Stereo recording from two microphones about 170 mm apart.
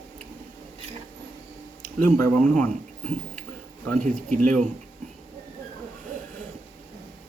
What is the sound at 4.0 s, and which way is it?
Speech, 50° right (ahead or behind).